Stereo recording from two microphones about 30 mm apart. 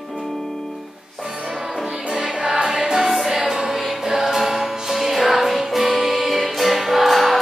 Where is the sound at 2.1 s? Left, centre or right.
Right.